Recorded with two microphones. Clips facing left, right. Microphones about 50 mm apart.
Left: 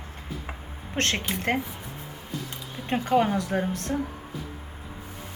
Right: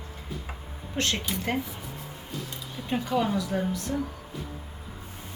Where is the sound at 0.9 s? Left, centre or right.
Left.